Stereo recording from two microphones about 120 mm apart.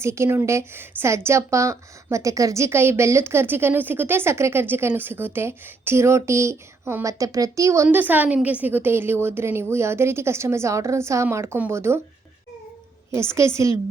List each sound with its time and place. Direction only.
0.0 s a woman's voice: 25° right (ahead or behind)
7.9 s a woman's voice: 15° right (ahead or behind)
13.1 s a woman's voice: 20° right (ahead or behind)